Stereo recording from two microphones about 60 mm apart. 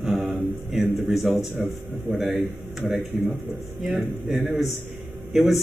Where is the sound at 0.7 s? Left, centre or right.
Centre.